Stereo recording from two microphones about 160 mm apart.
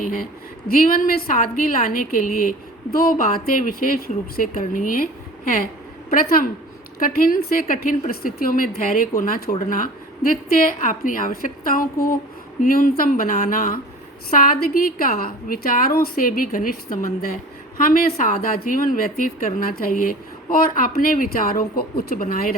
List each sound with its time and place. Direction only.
0.0 s a woman's voice: 60° left (ahead or behind)
6.1 s a woman's voice: 65° left (ahead or behind)